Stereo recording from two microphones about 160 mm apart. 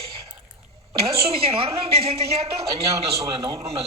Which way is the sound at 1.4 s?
35° right (ahead or behind).